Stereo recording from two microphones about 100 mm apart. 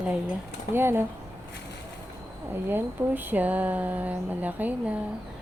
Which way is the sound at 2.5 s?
20° right (ahead or behind).